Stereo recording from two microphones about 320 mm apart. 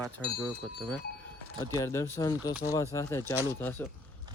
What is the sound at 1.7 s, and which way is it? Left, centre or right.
Speech, centre.